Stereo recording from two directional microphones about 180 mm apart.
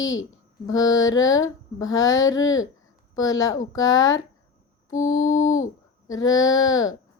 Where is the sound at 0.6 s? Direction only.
20° left (ahead or behind).